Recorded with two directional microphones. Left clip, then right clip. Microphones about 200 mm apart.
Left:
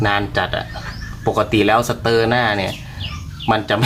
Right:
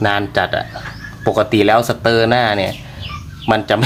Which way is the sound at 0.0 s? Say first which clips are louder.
Right 2 dB; 30° right (ahead or behind).